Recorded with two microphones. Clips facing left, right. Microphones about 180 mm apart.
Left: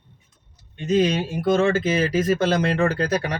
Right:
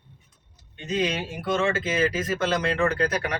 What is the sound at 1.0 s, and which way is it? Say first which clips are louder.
Speech: left 6 dB; 35° left (ahead or behind).